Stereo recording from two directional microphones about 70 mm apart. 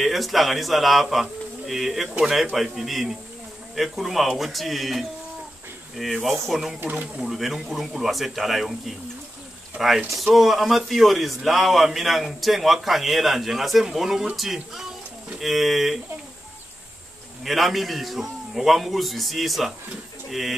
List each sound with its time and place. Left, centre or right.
0.0 s a man's voice: centre
6.8 s speech: right
7.2 s a man's voice: centre
17.4 s a man's voice: centre